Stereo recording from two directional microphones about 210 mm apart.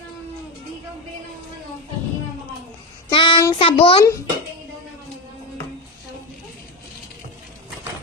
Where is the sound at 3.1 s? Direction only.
25° left (ahead or behind).